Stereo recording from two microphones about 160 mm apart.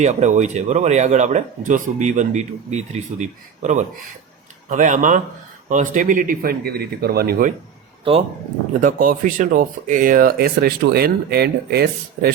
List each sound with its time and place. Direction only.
0.0 s speech: 45° right (ahead or behind); by 7.5 s 70° right (ahead or behind)
8.8 s speech: 55° right (ahead or behind); by 12.3 s 80° right